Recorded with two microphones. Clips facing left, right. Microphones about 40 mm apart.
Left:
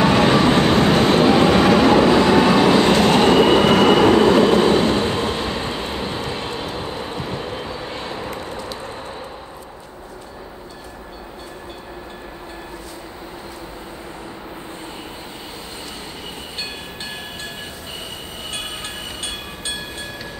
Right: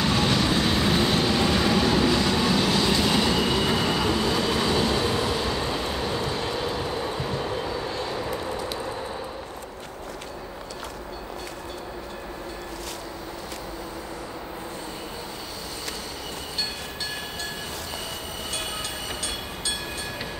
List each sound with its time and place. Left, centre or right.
0.0 s vehicle: left
1.6 s train: left
7.9 s vehicle: left
8.4 s a sound: left